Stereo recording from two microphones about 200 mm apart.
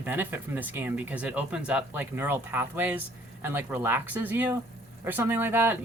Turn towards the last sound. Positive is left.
turn(degrees=-10)  # may be behind; listen again after turning